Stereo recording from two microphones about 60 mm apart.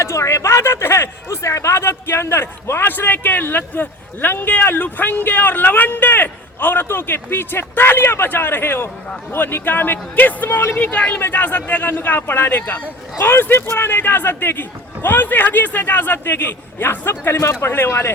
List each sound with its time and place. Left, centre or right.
0.0 s speech: left
17.3 s speech: left